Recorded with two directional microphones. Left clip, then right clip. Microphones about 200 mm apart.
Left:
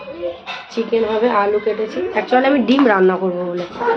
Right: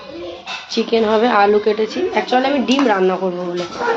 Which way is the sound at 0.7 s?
35° right (ahead or behind).